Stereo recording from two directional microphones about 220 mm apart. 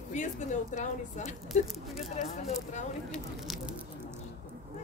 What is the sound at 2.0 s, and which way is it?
Speech, 35° left (ahead or behind).